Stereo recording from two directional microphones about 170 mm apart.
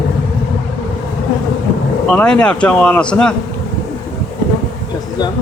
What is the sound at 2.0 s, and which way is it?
Speech, 5° left (ahead or behind).